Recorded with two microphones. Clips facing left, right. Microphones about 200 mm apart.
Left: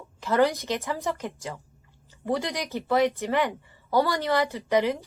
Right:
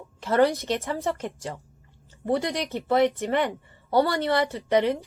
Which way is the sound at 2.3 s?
20° right (ahead or behind).